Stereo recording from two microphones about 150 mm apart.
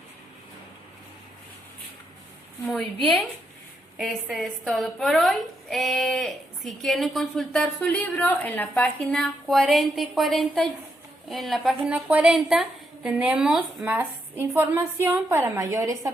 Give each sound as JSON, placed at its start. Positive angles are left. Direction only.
{"t": 2.7, "sound": "a woman's voice", "side_deg": 0}